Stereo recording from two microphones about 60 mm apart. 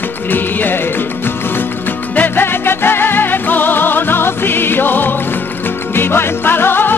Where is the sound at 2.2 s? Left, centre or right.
Left.